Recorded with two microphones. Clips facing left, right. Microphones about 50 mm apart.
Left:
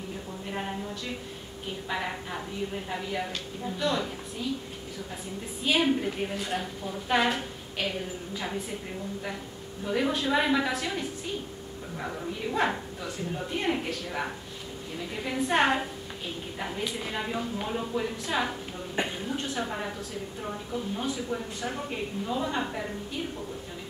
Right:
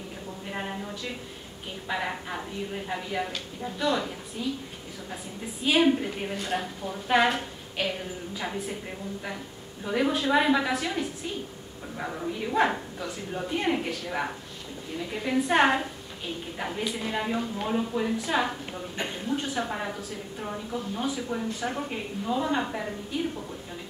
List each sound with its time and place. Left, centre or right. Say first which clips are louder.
0.5 s a sound: even; centre
1.9 s a woman's voice: right 3 dB; centre
5.6 s a woman's voice: right 3 dB; centre
9.8 s a woman's voice: right 2 dB; centre